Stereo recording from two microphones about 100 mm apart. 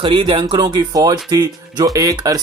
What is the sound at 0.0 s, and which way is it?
Speech, 60° right (ahead or behind).